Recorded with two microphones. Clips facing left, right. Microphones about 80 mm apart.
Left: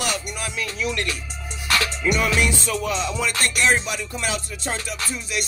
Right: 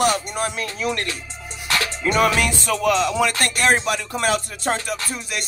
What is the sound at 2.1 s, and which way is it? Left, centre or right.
Music, right.